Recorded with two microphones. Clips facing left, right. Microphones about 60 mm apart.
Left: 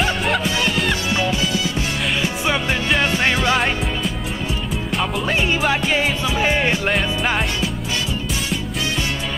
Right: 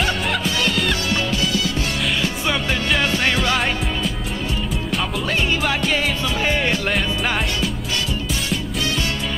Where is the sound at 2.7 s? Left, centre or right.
Centre.